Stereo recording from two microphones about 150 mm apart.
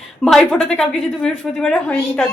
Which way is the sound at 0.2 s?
5° left (ahead or behind).